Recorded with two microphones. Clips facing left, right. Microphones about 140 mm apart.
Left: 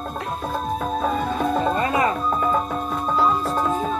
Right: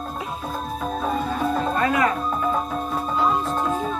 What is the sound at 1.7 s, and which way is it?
Speech, 20° left (ahead or behind).